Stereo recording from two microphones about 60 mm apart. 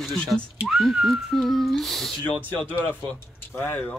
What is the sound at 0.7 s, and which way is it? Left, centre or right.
Speech, centre.